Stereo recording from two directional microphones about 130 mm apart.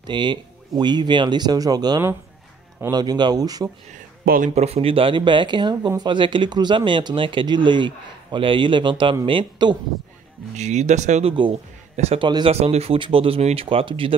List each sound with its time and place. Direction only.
0.0 s speech: 35° right (ahead or behind)
3.9 s speech: 80° right
4.6 s speech: 50° right (ahead or behind)
10.5 s speech: 60° right (ahead or behind)
12.2 s speech: 35° right (ahead or behind)
12.4 s speech: 50° right (ahead or behind)